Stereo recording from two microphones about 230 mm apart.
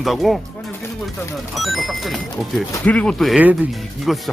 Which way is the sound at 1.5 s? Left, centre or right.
Centre.